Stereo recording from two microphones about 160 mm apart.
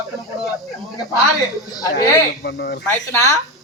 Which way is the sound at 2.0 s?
85° left.